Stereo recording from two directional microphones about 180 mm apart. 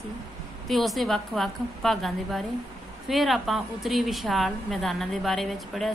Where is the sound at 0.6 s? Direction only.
Centre (ahead or behind).